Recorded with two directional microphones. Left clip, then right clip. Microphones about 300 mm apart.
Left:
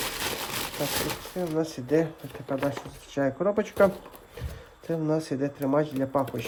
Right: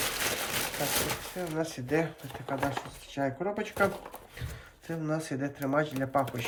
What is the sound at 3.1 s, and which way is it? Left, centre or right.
Speech, centre.